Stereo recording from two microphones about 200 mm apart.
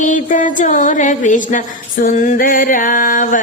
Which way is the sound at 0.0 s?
40° left (ahead or behind).